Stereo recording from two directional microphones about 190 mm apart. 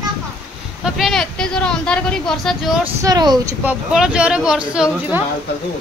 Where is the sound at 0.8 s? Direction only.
Centre (ahead or behind).